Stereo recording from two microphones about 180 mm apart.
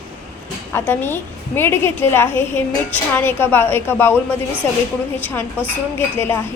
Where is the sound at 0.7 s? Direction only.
10° left (ahead or behind).